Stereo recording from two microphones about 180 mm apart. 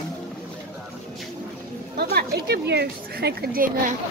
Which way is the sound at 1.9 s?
60° right (ahead or behind).